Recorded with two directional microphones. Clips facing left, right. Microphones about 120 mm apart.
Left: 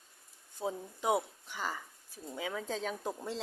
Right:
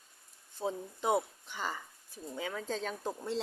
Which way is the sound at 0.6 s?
10° left (ahead or behind).